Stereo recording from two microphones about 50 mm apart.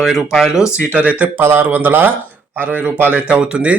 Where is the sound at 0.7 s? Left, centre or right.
Left.